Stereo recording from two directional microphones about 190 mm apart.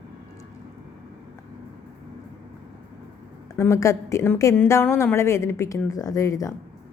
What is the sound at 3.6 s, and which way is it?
A woman's voice, 15° left (ahead or behind).